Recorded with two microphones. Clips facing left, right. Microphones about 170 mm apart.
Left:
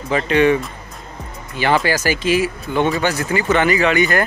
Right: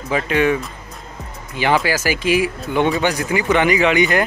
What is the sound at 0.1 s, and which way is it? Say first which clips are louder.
Speech: left 3 dB; 5° right (ahead or behind).